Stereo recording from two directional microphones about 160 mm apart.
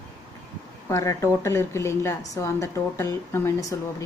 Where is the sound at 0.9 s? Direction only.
20° left (ahead or behind).